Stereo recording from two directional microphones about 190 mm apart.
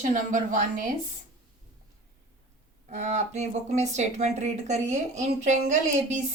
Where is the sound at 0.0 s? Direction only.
45° right (ahead or behind).